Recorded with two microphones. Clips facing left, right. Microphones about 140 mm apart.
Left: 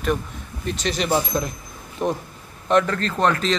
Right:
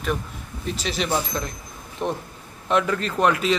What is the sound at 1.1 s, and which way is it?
Speech, 15° left (ahead or behind).